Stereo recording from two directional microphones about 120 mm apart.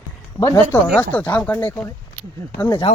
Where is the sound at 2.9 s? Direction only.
60° left (ahead or behind).